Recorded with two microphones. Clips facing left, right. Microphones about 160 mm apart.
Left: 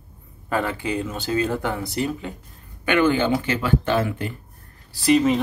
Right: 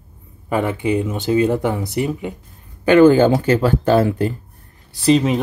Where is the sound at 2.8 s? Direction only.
40° right (ahead or behind).